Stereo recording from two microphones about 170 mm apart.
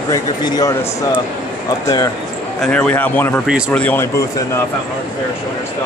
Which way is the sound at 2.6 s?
5° left (ahead or behind).